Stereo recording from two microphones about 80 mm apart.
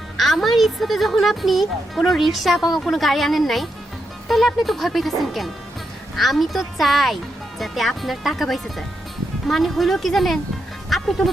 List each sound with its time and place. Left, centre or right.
0.2 s a woman's voice: centre
10.8 s music: centre